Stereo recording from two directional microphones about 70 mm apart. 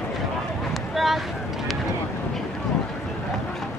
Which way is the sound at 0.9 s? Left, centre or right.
Centre.